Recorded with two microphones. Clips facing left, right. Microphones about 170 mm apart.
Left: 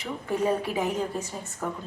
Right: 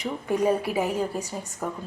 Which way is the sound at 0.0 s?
15° right (ahead or behind).